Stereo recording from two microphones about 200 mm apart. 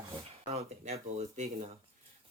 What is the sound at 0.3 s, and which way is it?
Speech, 30° right (ahead or behind).